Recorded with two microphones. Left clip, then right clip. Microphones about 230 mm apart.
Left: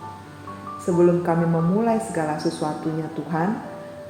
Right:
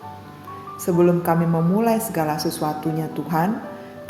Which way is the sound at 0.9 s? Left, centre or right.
Right.